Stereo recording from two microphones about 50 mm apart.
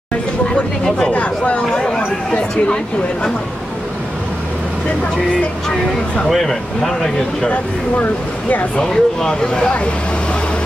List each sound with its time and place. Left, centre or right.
0.8 s speech: centre
1.1 s speech: left
1.7 s a sound: centre
6.2 s speech: centre
8.0 s speech: left
8.7 s speech: centre